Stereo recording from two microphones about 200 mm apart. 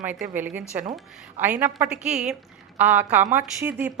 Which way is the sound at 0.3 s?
10° right (ahead or behind).